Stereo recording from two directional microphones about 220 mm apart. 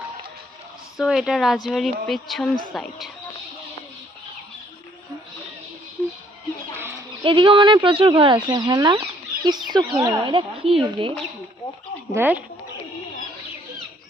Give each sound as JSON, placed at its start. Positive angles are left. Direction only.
{"t": 0.9, "sound": "speech", "side_deg": 0}
{"t": 7.3, "sound": "speech", "side_deg": -20}
{"t": 12.1, "sound": "speech", "side_deg": -10}